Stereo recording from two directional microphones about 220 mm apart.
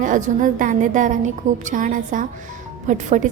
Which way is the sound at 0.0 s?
35° right (ahead or behind).